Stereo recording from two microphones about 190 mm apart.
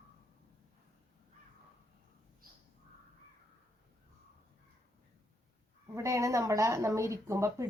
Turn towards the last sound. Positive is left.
turn(degrees=-15)  # may be behind; listen again after turning